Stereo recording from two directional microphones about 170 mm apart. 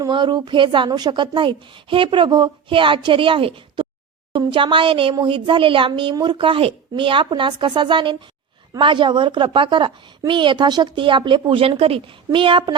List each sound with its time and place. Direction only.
0.0 s a woman's voice: 25° right (ahead or behind)